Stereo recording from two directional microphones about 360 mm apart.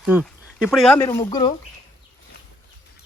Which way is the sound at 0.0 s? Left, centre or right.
Centre.